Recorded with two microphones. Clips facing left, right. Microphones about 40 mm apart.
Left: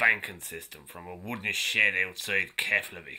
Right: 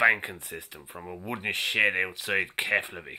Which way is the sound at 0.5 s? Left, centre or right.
Right.